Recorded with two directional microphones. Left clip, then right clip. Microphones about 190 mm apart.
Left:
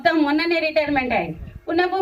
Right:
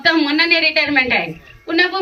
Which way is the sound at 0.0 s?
55° left (ahead or behind).